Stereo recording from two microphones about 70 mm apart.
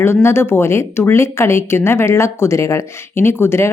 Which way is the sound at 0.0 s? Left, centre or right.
Left.